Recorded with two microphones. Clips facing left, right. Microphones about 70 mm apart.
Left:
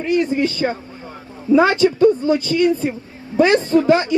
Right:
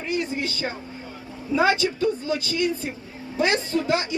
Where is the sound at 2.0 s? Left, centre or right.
Left.